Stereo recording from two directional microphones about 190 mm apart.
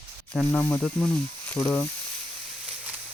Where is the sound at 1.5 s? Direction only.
10° left (ahead or behind).